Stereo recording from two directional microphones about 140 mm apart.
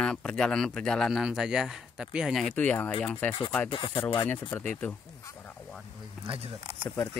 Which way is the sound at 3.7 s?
40° left (ahead or behind).